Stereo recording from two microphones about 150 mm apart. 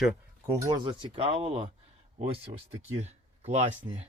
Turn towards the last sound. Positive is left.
turn(degrees=-30)  # may be behind; listen again after turning